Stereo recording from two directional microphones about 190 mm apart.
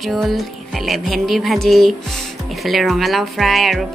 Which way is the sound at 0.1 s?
Centre (ahead or behind).